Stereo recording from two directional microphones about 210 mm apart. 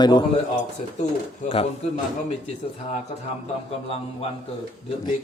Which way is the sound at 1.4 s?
30° left (ahead or behind).